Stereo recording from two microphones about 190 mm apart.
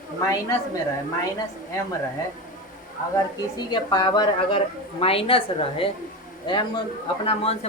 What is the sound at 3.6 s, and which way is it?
A woman's voice, 20° left (ahead or behind).